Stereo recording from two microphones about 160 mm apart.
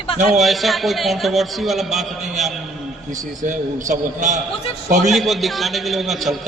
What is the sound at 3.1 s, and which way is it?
A man's voice, 55° right (ahead or behind).